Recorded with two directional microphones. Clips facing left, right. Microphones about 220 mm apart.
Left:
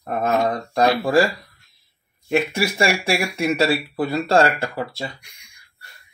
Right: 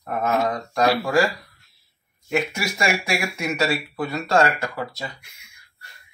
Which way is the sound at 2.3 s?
30° left (ahead or behind).